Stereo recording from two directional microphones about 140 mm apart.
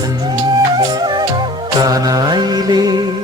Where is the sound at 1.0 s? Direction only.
35° right (ahead or behind).